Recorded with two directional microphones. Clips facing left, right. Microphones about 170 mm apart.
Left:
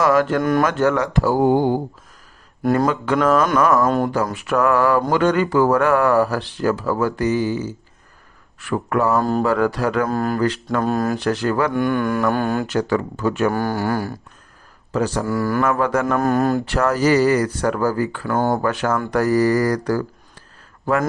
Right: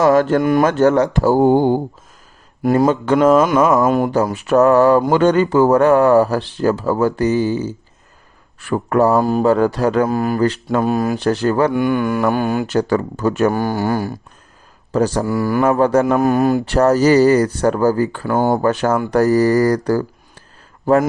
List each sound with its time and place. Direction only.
0.0 s speech: 25° right (ahead or behind)
10.1 s speech: 5° right (ahead or behind)
10.3 s speech: 25° right (ahead or behind)
11.2 s speech: 30° right (ahead or behind)
11.9 s speech: 10° right (ahead or behind)
12.6 s speech: 35° right (ahead or behind)
13.5 s speech: 15° right (ahead or behind)
14.9 s speech: 40° right (ahead or behind)
15.3 s speech: 15° right (ahead or behind)
15.6 s speech: 30° right (ahead or behind)
16.0 s speech: 20° right (ahead or behind)
16.6 s speech: 30° right (ahead or behind)